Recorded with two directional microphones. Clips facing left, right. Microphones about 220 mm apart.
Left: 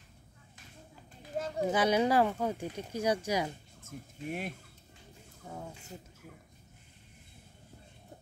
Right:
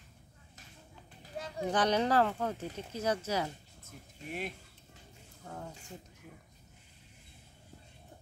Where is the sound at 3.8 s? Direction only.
50° left (ahead or behind).